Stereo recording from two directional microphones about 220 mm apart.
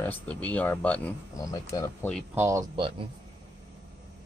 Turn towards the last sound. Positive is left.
turn(degrees=-25)  # may be behind; listen again after turning